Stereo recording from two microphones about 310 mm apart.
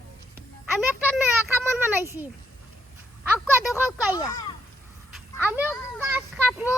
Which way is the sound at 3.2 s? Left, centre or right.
Centre.